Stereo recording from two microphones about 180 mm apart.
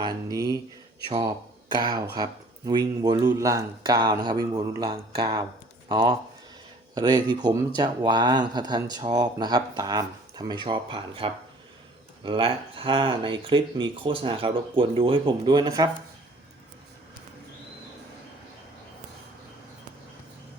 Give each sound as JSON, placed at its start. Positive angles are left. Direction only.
{"t": 0.0, "sound": "speech", "side_deg": -20}
{"t": 1.7, "sound": "speech", "side_deg": -20}